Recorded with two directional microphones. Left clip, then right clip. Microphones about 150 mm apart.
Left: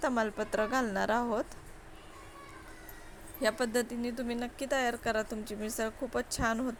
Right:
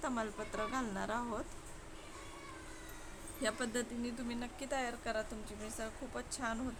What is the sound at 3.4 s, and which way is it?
Speech, 35° left (ahead or behind).